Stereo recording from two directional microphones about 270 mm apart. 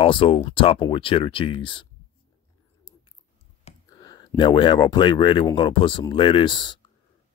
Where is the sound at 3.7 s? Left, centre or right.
Centre.